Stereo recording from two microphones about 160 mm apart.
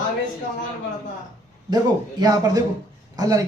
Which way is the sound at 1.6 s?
25° right (ahead or behind).